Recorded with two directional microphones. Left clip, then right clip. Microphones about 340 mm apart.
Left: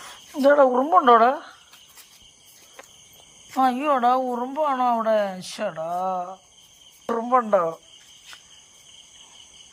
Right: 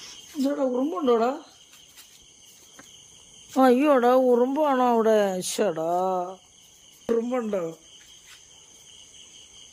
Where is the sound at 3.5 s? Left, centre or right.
Centre.